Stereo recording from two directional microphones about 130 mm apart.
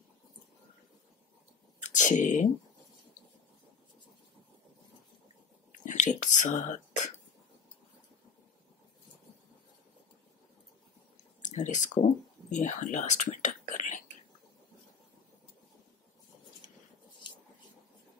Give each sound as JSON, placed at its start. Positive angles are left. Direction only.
{"t": 2.0, "sound": "speech", "side_deg": 75}
{"t": 5.9, "sound": "whispering", "side_deg": 75}
{"t": 11.4, "sound": "speech", "side_deg": 70}